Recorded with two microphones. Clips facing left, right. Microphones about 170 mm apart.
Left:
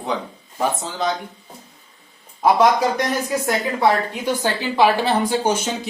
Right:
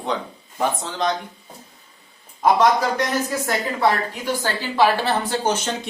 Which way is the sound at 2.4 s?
10° left (ahead or behind).